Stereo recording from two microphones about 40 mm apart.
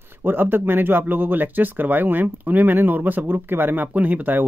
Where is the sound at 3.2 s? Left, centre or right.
Right.